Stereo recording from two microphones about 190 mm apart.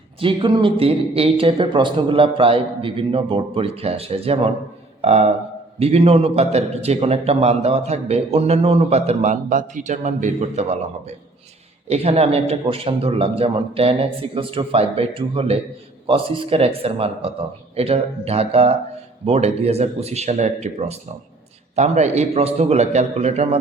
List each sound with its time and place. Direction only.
0.2 s a man's voice: 25° right (ahead or behind)